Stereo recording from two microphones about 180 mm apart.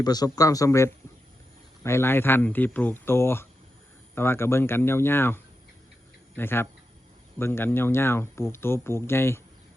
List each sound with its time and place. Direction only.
0.0 s a man's voice: 20° left (ahead or behind)